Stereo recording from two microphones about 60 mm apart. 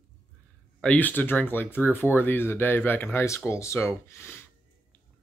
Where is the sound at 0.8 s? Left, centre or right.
Left.